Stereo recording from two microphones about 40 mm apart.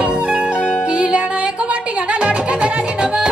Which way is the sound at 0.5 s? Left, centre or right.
Left.